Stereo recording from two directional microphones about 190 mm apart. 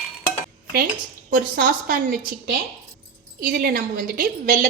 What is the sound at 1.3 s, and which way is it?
A woman's voice, 45° right (ahead or behind).